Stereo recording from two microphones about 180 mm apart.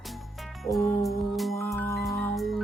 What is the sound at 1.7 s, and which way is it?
Music, 5° left (ahead or behind).